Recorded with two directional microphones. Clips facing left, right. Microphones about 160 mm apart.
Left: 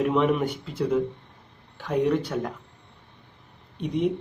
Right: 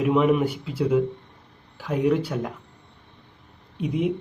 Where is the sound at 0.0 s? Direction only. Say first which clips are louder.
Right 2 dB; 5° right (ahead or behind).